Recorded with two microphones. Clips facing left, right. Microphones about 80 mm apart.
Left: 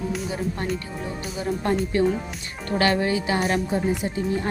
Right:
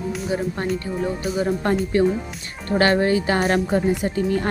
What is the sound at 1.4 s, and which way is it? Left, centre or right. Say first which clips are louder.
Speech: right 2 dB; right.